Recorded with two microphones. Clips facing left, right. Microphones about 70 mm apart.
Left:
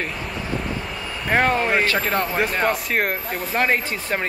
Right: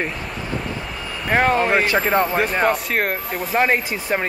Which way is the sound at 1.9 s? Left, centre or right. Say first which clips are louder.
Right 4 dB; centre.